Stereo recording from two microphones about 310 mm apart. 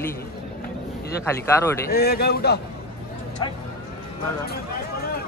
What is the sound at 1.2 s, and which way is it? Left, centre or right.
Speech, centre.